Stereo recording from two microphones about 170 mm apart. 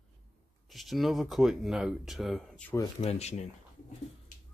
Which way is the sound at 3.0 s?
40° left (ahead or behind).